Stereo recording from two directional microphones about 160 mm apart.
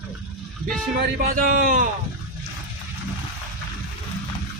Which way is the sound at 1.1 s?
65° right (ahead or behind).